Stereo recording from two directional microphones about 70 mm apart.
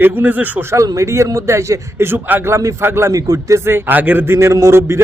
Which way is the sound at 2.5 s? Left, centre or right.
Right.